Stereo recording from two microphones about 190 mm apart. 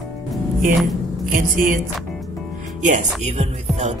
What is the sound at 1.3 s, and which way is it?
Speech, 45° right (ahead or behind).